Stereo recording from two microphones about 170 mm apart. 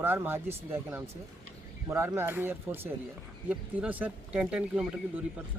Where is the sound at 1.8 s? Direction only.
15° right (ahead or behind).